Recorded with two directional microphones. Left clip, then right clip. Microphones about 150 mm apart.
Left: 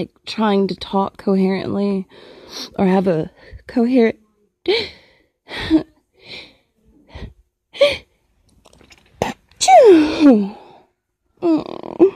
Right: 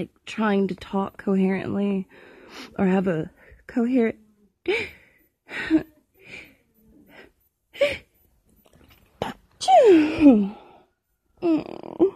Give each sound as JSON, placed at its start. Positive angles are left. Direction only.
{"t": 0.3, "sound": "speech", "side_deg": 35}
{"t": 2.8, "sound": "speech", "side_deg": 40}
{"t": 4.6, "sound": "sigh", "side_deg": 35}
{"t": 7.1, "sound": "gasp", "side_deg": 40}
{"t": 8.6, "sound": "whispering", "side_deg": 50}
{"t": 9.8, "sound": "a sound", "side_deg": 25}
{"t": 11.5, "sound": "groan", "side_deg": 40}